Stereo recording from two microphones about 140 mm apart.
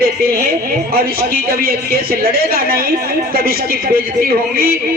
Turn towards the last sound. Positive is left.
turn(degrees=-90)